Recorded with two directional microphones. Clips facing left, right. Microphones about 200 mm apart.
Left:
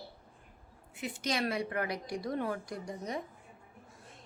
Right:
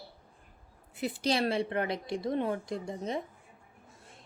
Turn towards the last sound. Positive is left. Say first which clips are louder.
# right 4 dB
turn(degrees=-25)  # may be behind; listen again after turning